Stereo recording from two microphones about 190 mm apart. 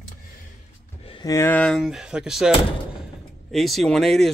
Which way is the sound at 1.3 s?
10° left (ahead or behind).